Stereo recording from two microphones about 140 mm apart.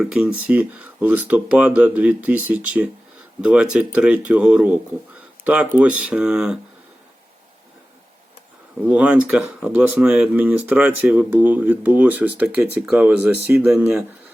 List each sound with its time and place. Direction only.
0.0 s speech: 5° right (ahead or behind)
8.9 s speech: 10° right (ahead or behind)